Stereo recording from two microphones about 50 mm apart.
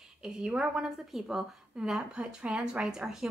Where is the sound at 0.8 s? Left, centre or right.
Centre.